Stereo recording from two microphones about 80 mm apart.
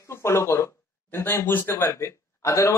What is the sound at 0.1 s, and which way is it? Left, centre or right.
Speech, left.